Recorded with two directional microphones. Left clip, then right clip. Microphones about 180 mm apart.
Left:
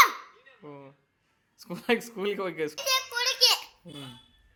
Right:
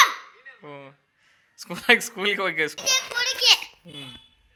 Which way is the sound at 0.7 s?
5° right (ahead or behind).